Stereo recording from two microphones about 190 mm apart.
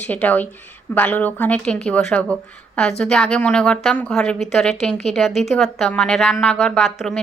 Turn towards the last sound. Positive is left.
turn(degrees=0)  # may be behind; listen again after turning